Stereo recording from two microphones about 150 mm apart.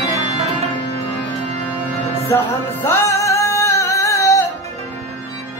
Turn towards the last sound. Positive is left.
turn(degrees=20)  # may be behind; listen again after turning